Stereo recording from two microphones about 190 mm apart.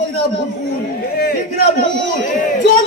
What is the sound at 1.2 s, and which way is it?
Speech, 55° left (ahead or behind).